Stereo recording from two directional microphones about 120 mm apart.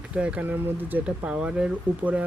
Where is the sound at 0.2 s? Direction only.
10° right (ahead or behind).